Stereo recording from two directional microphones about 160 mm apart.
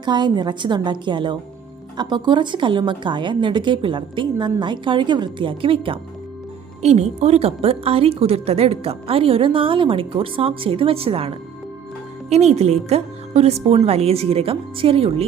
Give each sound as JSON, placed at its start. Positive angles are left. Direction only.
{"t": 0.0, "sound": "a woman's voice", "side_deg": -30}
{"t": 6.8, "sound": "a woman's voice", "side_deg": -45}